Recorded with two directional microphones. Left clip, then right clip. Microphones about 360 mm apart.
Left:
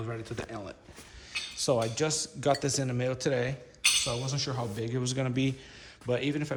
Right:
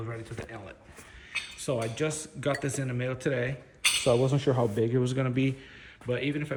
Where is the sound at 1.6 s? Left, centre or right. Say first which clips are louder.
Left 3 dB; centre.